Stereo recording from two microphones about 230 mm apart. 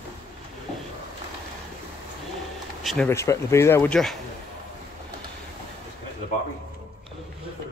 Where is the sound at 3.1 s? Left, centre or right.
Centre.